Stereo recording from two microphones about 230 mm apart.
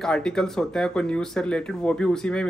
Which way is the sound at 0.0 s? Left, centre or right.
Centre.